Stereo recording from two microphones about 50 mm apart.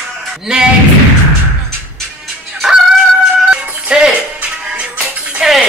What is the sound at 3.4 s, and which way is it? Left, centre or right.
Music, centre.